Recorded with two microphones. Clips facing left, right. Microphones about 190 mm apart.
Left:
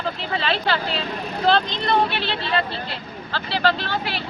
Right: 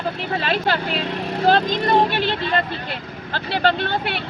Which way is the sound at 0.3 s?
45° right (ahead or behind).